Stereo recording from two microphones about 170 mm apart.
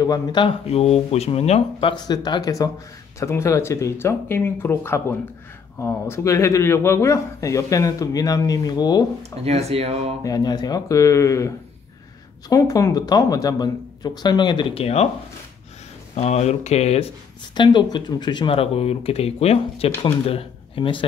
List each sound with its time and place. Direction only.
0.0 s speech: 25° left (ahead or behind)
9.2 s speech: 40° right (ahead or behind)
10.2 s speech: 25° left (ahead or behind)
16.2 s speech: 40° left (ahead or behind)
17.6 s speech: 25° left (ahead or behind)